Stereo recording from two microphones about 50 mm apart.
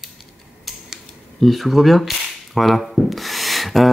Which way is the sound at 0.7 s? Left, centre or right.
Centre.